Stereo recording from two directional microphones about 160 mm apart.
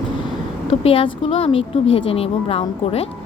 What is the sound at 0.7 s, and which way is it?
A woman's voice, 35° left (ahead or behind).